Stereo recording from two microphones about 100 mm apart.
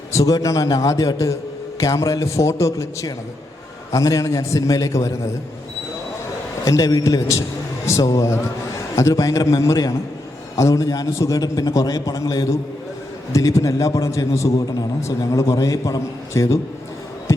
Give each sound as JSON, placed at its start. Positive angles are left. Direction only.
{"t": 0.1, "sound": "a man's voice", "side_deg": 35}
{"t": 6.7, "sound": "a man's voice", "side_deg": 35}